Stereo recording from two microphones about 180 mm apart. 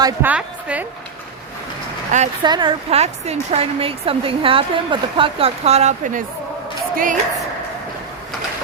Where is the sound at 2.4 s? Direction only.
25° right (ahead or behind); by 7.2 s 50° right (ahead or behind).